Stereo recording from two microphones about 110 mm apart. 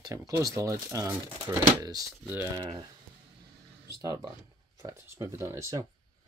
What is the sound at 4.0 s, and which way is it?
Speech, 35° right (ahead or behind).